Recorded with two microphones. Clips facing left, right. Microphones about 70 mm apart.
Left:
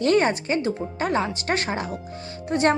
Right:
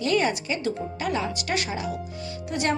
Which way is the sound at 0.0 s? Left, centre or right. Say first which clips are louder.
Left 4 dB; left.